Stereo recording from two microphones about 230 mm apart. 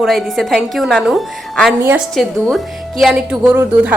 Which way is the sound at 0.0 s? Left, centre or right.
Centre.